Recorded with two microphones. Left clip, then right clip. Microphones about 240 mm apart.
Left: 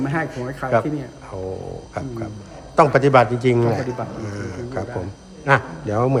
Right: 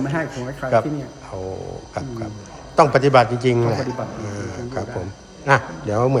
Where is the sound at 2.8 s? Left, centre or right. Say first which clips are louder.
Even; centre.